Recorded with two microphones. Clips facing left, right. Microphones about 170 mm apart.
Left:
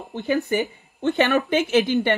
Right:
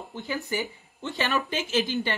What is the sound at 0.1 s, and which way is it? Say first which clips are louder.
Speech: left 9 dB; 65° left (ahead or behind).